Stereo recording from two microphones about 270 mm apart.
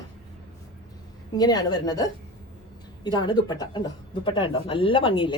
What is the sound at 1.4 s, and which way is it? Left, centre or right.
Speech, centre.